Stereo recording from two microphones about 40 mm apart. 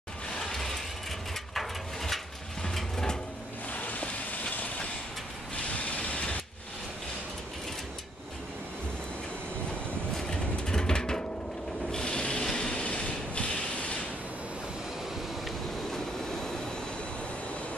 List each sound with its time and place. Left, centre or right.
0.4 s mechanisms: centre
1.5 s pigeon: centre
2.6 s a sound: centre
3.7 s vehicle: left
5.7 s vehicle: left
10.1 s vehicle: centre
11.9 s rub: centre
12.5 s train: left